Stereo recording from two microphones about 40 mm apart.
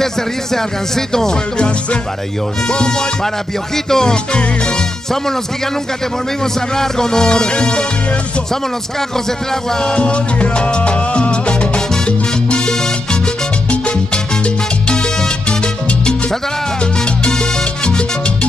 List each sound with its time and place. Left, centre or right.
0.0 s speech: centre
2.7 s music: left
6.4 s speech: centre
9.5 s speech: centre
9.9 s salsa music: left